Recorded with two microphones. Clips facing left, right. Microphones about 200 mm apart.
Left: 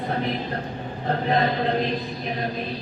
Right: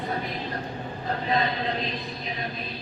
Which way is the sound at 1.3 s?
55° left (ahead or behind).